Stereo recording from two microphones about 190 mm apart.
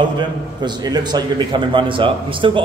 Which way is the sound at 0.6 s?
20° right (ahead or behind).